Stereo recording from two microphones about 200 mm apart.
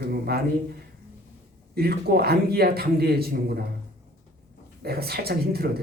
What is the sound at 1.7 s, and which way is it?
A man's voice, 50° right (ahead or behind).